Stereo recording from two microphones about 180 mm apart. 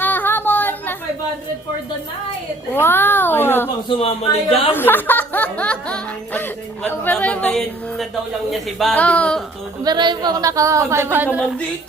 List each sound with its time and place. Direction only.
0.0 s a sound: 10° left (ahead or behind)
2.7 s speech: 10° left (ahead or behind)
3.8 s a man's voice: 35° left (ahead or behind)
4.7 s speech: 10° left (ahead or behind)
9.8 s a woman's voice: 25° right (ahead or behind); by 11.5 s 5° right (ahead or behind)